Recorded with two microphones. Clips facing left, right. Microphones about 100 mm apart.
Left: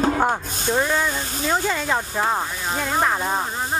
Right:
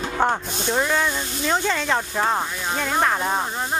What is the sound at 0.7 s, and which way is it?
Speech, 5° left (ahead or behind).